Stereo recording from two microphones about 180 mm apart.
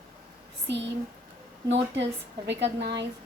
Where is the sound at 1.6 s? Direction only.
80° right.